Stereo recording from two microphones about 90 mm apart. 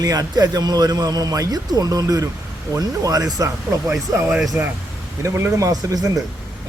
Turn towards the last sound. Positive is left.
turn(degrees=-40)  # may be behind; listen again after turning